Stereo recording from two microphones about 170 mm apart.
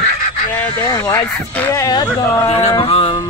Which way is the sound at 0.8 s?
20° left (ahead or behind).